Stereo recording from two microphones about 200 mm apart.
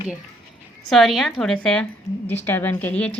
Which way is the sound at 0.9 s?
Centre (ahead or behind).